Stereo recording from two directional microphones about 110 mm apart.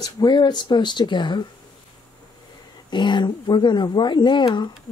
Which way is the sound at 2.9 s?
45° left (ahead or behind).